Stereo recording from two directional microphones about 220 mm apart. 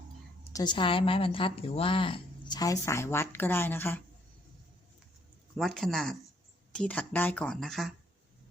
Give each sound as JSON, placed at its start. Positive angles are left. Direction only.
{"t": 0.5, "sound": "a woman's voice", "side_deg": 20}
{"t": 5.5, "sound": "speech", "side_deg": 0}